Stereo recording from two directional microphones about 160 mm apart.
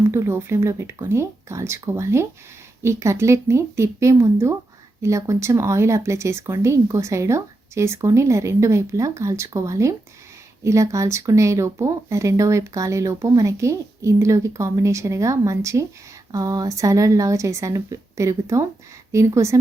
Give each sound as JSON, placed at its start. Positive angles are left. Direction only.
{"t": 0.1, "sound": "speech", "side_deg": -15}